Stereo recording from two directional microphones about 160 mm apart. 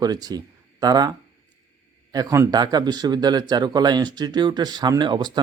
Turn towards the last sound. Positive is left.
turn(degrees=-30)  # may be behind; listen again after turning